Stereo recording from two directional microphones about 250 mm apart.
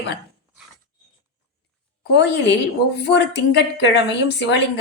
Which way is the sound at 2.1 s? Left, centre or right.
Left.